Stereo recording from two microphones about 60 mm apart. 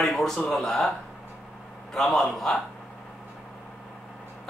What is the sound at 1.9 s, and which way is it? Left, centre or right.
Speech, centre.